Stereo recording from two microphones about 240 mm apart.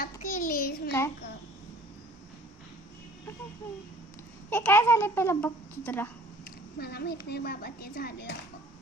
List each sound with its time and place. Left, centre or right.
0.0 s a sound: left
4.4 s a child's voice: centre
6.7 s speech: left